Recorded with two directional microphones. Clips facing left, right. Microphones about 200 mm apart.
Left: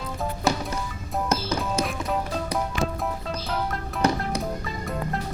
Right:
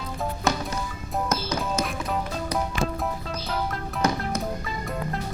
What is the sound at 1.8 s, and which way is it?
Music, centre (ahead or behind).